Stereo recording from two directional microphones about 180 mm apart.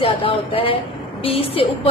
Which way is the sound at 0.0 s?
30° left (ahead or behind).